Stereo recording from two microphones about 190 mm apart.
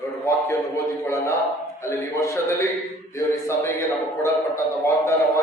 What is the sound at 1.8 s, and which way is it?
Speech, 15° left (ahead or behind).